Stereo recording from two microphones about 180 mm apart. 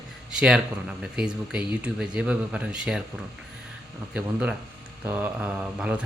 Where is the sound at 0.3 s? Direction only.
5° right (ahead or behind).